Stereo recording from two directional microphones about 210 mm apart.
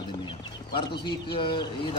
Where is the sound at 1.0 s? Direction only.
20° left (ahead or behind).